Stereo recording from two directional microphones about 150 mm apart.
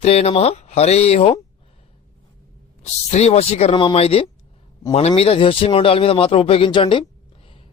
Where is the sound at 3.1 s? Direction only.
45° left (ahead or behind).